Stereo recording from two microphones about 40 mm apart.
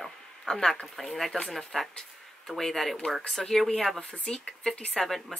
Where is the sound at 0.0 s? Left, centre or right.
Centre.